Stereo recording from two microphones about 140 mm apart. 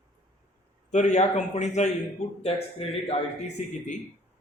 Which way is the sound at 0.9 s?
55° left (ahead or behind).